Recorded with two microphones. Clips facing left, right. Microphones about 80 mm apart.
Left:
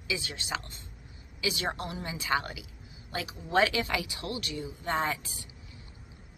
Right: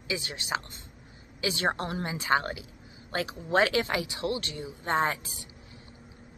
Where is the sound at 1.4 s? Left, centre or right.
Right.